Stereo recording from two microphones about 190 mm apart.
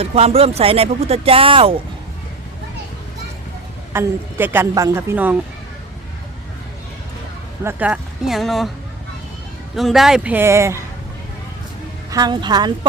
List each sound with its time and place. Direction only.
0.0 s speech: 30° right (ahead or behind)
3.9 s a woman's voice: 10° right (ahead or behind)
7.6 s speech: 10° right (ahead or behind)
9.7 s a woman's voice: centre (ahead or behind)
12.1 s speech: 20° right (ahead or behind)